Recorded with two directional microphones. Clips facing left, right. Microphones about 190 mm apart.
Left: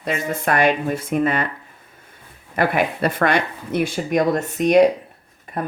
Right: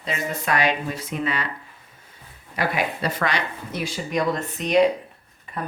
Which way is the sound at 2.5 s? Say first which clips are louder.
Left 5 dB; 55° left (ahead or behind).